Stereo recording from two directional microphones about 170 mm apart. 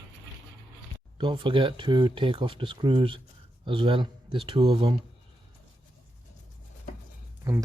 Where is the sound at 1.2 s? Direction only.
30° right (ahead or behind).